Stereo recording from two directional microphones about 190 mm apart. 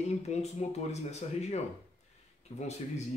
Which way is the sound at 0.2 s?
35° left (ahead or behind).